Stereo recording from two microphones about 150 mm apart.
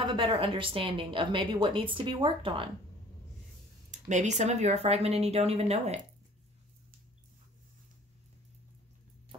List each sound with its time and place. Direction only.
0.0 s a woman's voice: 35° right (ahead or behind)
3.9 s speech: 55° right (ahead or behind)